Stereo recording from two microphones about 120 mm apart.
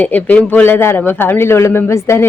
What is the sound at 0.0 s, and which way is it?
A woman's voice, 15° left (ahead or behind).